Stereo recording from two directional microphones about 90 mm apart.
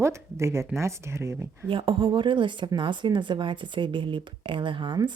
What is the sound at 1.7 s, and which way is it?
Speech, 70° right (ahead or behind).